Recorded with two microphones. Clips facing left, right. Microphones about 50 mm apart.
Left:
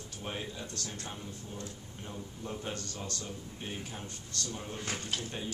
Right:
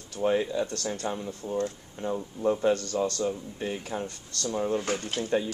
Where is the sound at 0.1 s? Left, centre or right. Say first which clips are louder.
Right 15 dB; right.